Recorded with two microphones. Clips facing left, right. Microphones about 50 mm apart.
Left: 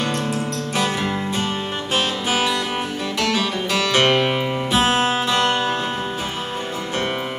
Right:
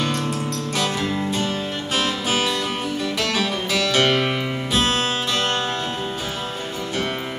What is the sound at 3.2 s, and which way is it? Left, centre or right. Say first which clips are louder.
Music: left 4 dB; centre.